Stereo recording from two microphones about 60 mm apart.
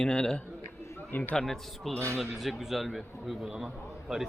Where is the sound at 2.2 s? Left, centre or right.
Centre.